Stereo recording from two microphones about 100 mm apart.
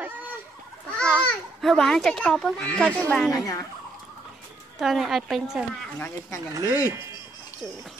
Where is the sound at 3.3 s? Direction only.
35° left (ahead or behind).